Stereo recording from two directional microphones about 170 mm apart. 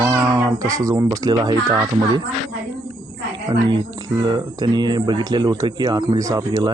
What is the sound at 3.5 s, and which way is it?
Speech, 25° right (ahead or behind).